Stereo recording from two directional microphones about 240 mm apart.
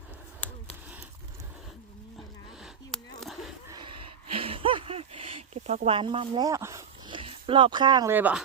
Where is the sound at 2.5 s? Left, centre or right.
Centre.